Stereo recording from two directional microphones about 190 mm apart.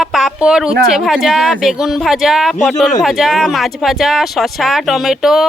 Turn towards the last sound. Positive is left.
turn(degrees=0)  # may be behind; listen again after turning